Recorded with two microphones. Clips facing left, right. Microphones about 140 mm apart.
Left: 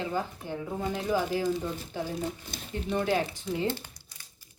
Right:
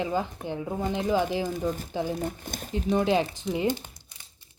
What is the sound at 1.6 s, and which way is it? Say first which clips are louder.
Speech: right 5 dB; 45° right (ahead or behind).